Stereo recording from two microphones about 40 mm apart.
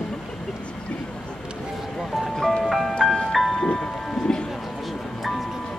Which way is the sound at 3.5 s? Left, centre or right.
Centre.